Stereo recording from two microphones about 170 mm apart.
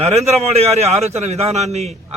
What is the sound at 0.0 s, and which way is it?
A man's voice, 40° right (ahead or behind).